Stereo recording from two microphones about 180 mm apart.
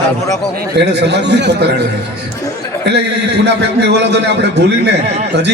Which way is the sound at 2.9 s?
65° right (ahead or behind).